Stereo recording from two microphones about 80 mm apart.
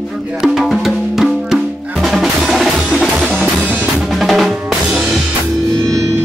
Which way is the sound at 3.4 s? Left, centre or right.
Centre.